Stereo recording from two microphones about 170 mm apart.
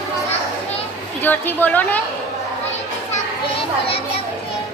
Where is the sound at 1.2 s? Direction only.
10° left (ahead or behind).